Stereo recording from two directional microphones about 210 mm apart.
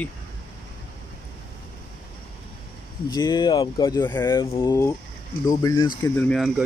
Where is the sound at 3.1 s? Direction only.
20° left (ahead or behind).